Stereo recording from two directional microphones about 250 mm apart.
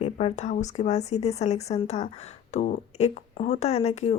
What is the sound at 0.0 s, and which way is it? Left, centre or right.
Speech, left.